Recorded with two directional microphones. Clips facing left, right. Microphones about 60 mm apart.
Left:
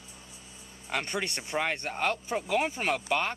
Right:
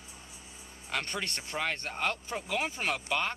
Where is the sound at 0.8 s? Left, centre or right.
Centre.